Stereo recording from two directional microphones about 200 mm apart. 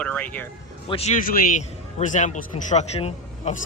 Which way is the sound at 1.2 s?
45° left (ahead or behind).